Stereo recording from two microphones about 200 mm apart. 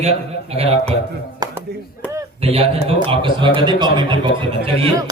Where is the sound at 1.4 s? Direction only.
20° right (ahead or behind).